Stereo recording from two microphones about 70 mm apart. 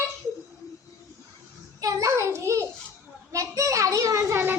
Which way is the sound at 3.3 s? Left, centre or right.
Right.